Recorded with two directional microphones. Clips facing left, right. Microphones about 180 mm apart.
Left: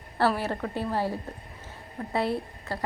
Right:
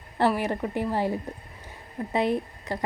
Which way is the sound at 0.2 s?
15° right (ahead or behind).